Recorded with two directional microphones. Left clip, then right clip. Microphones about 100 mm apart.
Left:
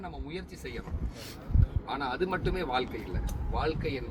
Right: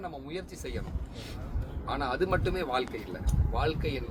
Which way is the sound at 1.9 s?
25° right (ahead or behind).